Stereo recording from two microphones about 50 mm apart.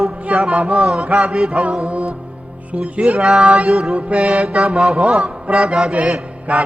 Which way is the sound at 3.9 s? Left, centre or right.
Right.